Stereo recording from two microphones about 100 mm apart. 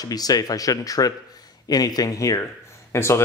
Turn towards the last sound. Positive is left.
turn(degrees=25)  # may be behind; listen again after turning